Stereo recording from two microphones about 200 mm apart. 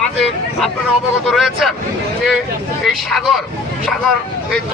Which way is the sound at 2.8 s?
Centre (ahead or behind).